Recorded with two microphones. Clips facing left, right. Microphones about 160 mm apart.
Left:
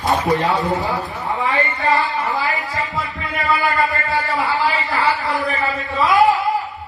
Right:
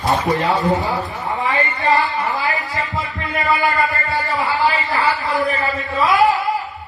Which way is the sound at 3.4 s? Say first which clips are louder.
Right 1 dB; centre (ahead or behind).